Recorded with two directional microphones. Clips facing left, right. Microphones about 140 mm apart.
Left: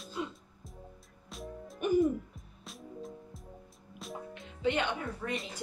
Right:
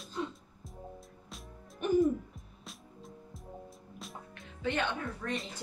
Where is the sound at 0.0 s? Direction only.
10° left (ahead or behind).